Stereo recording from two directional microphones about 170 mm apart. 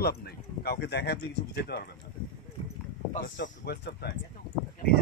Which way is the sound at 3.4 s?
80° left.